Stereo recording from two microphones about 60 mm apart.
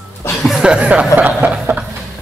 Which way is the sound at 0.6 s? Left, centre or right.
Centre.